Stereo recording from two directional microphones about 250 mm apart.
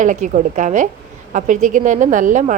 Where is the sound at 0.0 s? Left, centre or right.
Right.